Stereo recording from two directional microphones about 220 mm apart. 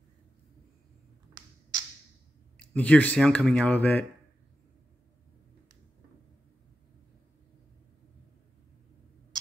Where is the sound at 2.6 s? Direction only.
5° left (ahead or behind).